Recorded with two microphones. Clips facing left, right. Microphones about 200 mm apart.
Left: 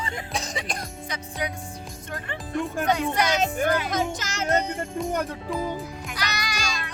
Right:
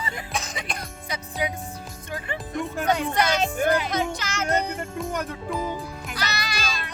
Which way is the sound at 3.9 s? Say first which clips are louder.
Even; 45° left (ahead or behind).